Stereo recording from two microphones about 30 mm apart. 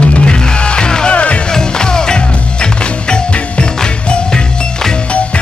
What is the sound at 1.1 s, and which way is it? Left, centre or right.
Music, left.